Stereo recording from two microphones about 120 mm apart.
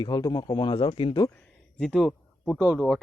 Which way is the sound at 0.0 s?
35° left (ahead or behind).